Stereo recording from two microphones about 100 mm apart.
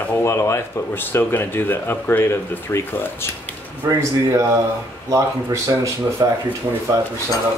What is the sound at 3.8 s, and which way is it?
Speech, 35° right (ahead or behind).